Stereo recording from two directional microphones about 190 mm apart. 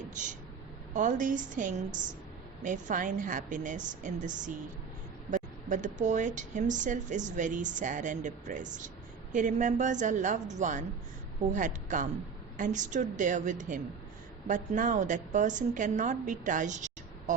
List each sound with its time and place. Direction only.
0.9 s a woman's voice: 45° right (ahead or behind)